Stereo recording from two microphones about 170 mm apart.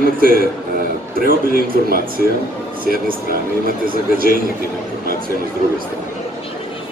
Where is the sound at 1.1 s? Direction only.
60° right (ahead or behind).